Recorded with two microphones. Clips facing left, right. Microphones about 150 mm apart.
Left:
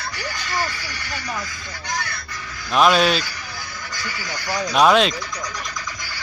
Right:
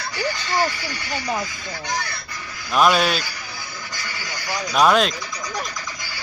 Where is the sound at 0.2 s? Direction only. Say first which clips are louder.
Right 6 dB; 30° right (ahead or behind).